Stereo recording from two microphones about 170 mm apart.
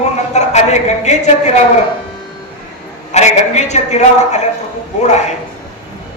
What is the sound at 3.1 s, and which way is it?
A woman's voice, 40° left (ahead or behind).